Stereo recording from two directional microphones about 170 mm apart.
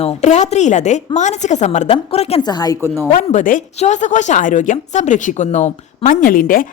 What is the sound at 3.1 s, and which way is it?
A woman's voice, 50° left (ahead or behind).